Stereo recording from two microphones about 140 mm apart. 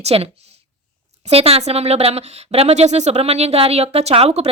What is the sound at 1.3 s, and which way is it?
Speech, 45° right (ahead or behind).